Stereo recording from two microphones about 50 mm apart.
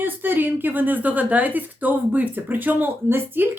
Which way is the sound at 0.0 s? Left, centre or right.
Right.